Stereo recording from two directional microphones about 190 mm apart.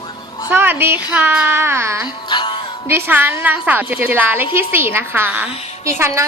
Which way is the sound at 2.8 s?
10° right (ahead or behind).